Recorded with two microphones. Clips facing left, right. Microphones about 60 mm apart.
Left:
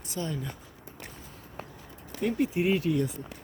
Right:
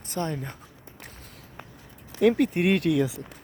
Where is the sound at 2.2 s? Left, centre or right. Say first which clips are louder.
Right 6 dB; right.